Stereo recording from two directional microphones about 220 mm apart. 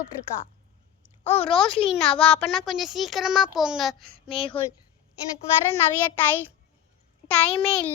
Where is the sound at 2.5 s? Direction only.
Centre (ahead or behind).